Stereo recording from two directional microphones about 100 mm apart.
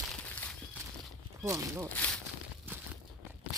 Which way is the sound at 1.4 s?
30° right (ahead or behind).